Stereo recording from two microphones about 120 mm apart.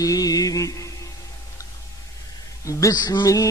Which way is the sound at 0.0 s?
30° left (ahead or behind).